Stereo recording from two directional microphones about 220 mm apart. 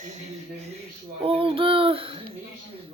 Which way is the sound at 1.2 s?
25° right (ahead or behind).